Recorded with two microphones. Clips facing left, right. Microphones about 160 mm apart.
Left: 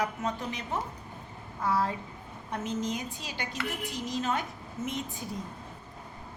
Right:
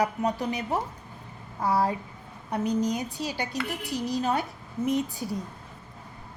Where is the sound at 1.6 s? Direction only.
35° right (ahead or behind).